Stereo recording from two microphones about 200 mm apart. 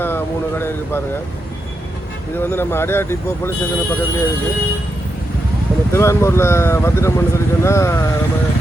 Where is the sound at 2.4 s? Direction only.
10° left (ahead or behind).